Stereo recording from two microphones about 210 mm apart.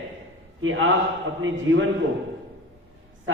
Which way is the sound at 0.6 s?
70° right (ahead or behind).